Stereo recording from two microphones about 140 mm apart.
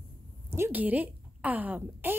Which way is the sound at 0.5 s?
15° right (ahead or behind).